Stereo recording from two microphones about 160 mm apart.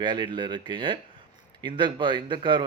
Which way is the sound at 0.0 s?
30° right (ahead or behind).